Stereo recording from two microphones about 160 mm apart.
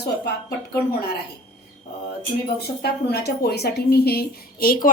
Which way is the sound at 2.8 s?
85° left.